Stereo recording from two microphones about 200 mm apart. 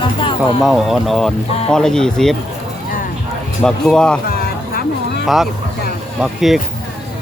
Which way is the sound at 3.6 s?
5° left (ahead or behind).